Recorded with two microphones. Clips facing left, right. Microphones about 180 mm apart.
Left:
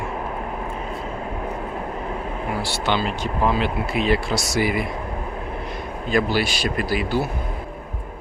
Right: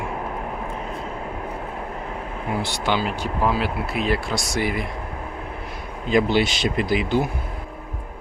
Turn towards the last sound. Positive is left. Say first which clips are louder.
# right 1 dB
turn(degrees=-20)  # may be behind; listen again after turning